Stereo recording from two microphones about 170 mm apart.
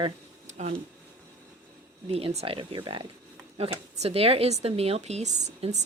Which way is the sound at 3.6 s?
40° right (ahead or behind).